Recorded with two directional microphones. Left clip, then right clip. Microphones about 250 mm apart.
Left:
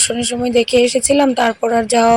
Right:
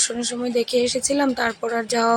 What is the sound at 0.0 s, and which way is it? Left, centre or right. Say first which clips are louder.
Speech: left 7 dB; centre.